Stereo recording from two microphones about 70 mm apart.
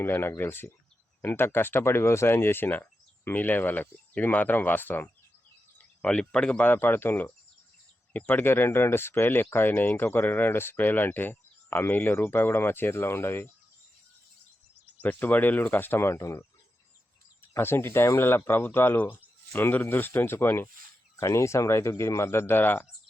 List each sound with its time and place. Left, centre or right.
0.0 s speech: left
6.0 s speech: centre
6.7 s speech: left
15.0 s speech: left
17.6 s speech: left